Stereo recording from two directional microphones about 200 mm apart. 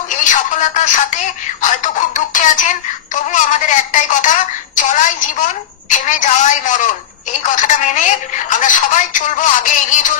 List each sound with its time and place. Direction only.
0.2 s a woman's voice: 40° left (ahead or behind)